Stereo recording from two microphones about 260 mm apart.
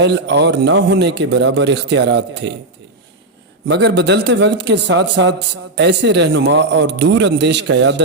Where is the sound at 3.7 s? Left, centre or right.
Right.